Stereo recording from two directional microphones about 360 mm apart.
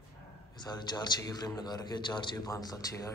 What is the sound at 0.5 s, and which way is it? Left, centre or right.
A man's voice, centre.